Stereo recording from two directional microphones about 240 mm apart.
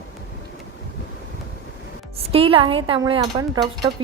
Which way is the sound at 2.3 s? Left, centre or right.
Right.